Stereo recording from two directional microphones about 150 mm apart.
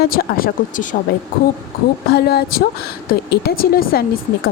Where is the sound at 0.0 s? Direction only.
75° left (ahead or behind); by 0.9 s 60° left (ahead or behind).